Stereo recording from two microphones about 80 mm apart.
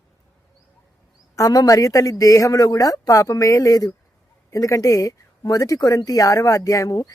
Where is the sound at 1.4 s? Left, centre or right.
Left.